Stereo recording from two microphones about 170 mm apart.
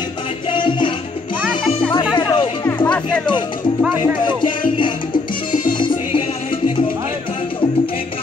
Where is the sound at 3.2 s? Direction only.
25° left (ahead or behind).